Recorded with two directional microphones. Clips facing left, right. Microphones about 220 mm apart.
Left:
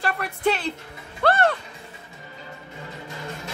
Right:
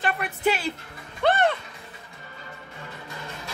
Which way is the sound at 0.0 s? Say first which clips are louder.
Left 1 dB; centre (ahead or behind).